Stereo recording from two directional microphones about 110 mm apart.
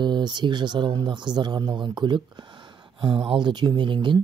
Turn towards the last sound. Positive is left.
turn(degrees=-45)  # may be behind; listen again after turning